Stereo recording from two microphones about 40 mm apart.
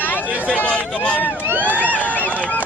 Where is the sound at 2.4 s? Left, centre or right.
Left.